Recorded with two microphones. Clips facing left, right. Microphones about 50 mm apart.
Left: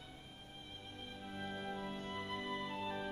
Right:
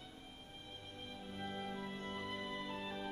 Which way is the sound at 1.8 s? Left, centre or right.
Left.